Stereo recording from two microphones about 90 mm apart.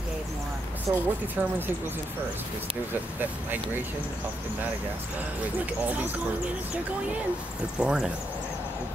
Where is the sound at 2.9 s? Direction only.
20° right (ahead or behind).